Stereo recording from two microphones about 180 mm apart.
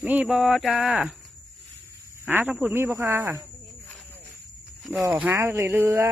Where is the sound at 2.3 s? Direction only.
10° right (ahead or behind).